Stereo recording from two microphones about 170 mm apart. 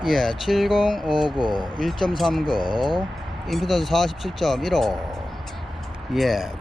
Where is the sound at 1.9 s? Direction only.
30° left (ahead or behind).